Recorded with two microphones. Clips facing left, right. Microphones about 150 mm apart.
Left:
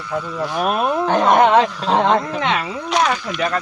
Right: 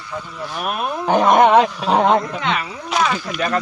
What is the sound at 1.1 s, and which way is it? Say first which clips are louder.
Speech: right 2 dB; 15° right (ahead or behind).